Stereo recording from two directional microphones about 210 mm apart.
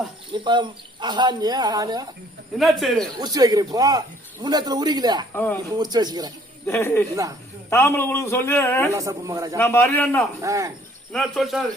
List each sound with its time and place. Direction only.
0.3 s speech: 20° right (ahead or behind)
2.6 s speech: centre (ahead or behind)
3.2 s a man's voice: 15° right (ahead or behind)
5.3 s a man's voice: 10° left (ahead or behind)
5.7 s speech: 20° right (ahead or behind)
6.7 s a man's voice: 10° left (ahead or behind)
8.9 s a man's voice: 15° right (ahead or behind)
9.6 s a man's voice: 10° left (ahead or behind)
10.4 s a man's voice: 15° right (ahead or behind)
11.1 s speech: centre (ahead or behind)